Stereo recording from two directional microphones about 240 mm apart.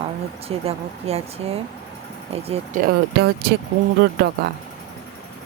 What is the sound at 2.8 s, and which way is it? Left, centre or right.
Speech, right.